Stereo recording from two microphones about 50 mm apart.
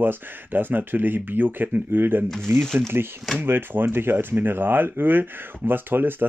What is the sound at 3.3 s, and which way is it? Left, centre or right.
Speech, right.